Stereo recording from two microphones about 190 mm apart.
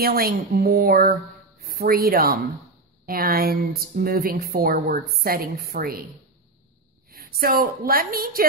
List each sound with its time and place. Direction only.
0.0 s speech: 50° right (ahead or behind)
7.1 s a woman's voice: 50° right (ahead or behind)